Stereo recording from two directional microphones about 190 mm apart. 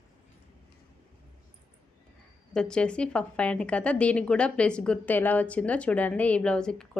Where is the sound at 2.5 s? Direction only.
5° left (ahead or behind).